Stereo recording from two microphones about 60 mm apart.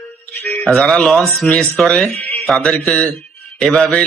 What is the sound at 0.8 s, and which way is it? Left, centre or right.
A man's voice, centre.